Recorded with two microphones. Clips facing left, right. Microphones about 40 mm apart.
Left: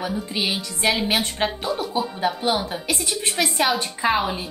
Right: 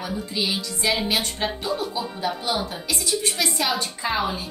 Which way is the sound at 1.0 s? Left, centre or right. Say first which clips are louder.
Left 2 dB; left.